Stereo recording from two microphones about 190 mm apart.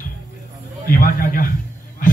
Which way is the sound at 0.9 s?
45° left (ahead or behind).